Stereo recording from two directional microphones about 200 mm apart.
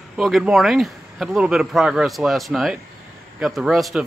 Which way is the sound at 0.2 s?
Centre (ahead or behind).